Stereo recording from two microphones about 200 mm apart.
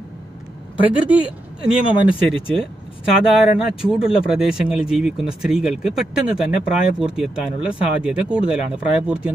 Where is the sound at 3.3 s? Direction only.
5° right (ahead or behind).